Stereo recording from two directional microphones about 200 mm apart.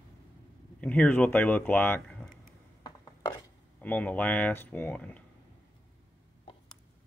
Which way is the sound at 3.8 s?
10° left (ahead or behind).